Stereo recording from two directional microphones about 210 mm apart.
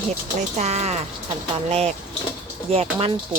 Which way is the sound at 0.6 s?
30° right (ahead or behind).